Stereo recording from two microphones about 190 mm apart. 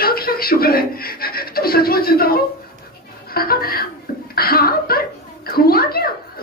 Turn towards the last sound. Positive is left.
turn(degrees=55)  # may be behind; listen again after turning